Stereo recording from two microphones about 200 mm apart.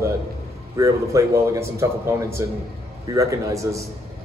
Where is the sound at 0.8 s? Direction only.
15° right (ahead or behind).